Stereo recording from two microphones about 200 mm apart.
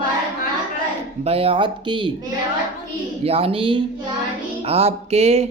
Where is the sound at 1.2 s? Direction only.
30° right (ahead or behind).